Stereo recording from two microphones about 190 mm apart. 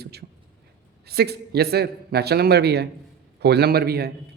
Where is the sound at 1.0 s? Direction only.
55° right (ahead or behind).